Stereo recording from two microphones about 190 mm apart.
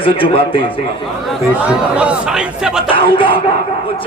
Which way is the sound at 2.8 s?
25° left (ahead or behind).